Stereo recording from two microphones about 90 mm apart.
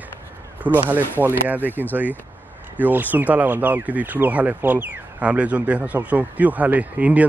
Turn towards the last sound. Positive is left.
turn(degrees=-15)  # may be behind; listen again after turning